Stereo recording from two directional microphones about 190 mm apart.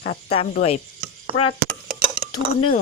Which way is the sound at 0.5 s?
35° left (ahead or behind).